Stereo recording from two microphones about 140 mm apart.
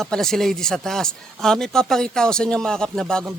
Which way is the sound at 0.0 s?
5° left (ahead or behind).